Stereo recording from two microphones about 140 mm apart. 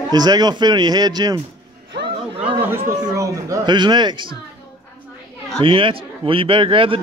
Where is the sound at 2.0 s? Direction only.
35° right (ahead or behind).